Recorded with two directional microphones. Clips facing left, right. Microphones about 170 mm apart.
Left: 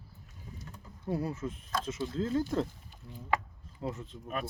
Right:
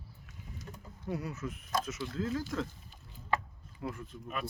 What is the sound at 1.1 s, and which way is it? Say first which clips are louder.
Speech: left 4 dB; 30° left (ahead or behind).